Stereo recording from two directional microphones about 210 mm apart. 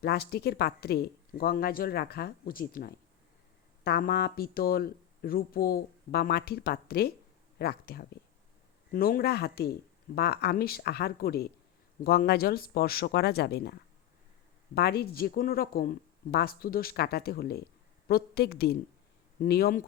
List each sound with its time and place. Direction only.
0.0 s speech: 50° left (ahead or behind)
14.8 s speech: 50° left (ahead or behind)